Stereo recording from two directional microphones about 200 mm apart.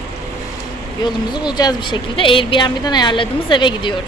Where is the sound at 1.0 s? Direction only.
20° left (ahead or behind).